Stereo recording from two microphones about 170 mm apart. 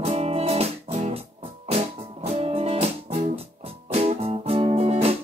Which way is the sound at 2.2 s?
35° right (ahead or behind).